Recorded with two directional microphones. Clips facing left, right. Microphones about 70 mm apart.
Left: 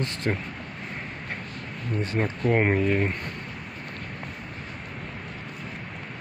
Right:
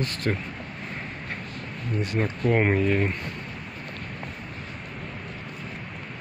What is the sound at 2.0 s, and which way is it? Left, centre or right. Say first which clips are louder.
Speech: even; left.